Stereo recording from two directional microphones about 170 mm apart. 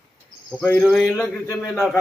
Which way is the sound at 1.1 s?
10° left (ahead or behind).